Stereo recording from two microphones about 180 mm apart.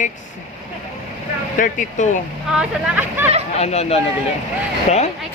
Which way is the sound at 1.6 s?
45° left (ahead or behind).